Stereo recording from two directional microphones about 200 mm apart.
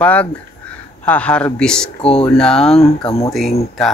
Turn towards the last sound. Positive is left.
turn(degrees=0)  # may be behind; listen again after turning